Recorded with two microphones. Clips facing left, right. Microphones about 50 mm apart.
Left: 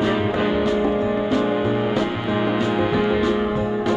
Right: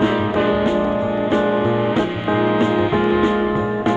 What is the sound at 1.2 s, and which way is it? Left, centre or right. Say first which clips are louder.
Music: right 3 dB; right.